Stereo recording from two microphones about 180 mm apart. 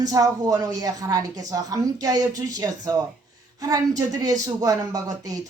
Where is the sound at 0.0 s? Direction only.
20° right (ahead or behind).